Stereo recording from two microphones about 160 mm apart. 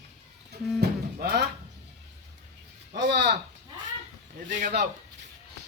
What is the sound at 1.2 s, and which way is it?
Speech, 90° right.